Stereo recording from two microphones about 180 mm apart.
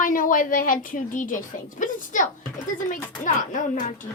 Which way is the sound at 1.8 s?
45° left (ahead or behind).